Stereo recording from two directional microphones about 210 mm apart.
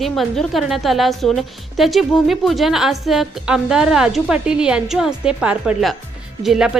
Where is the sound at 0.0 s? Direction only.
Centre (ahead or behind).